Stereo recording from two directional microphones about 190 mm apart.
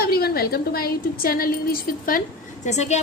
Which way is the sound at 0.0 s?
55° left (ahead or behind).